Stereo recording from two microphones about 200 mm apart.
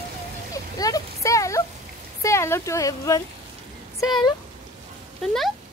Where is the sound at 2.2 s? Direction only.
15° left (ahead or behind).